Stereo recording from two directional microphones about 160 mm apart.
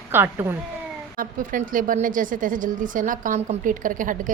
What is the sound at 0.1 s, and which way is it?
Speech, 15° right (ahead or behind).